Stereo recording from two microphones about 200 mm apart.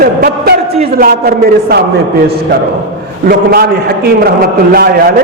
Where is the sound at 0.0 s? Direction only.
50° right (ahead or behind).